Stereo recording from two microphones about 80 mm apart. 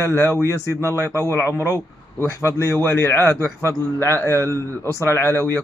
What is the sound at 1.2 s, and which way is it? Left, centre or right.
A man's voice, left.